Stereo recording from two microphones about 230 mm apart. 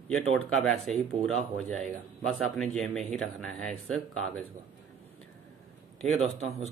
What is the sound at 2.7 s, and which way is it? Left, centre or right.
Speech, centre.